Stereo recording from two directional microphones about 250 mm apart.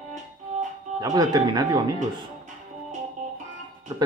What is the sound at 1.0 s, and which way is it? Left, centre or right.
Speech, centre.